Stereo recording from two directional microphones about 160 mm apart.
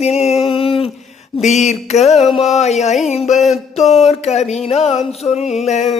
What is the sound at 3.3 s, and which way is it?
Music, centre (ahead or behind).